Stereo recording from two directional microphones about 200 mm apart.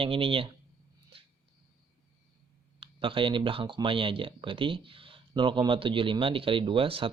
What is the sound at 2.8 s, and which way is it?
Speech, 25° right (ahead or behind).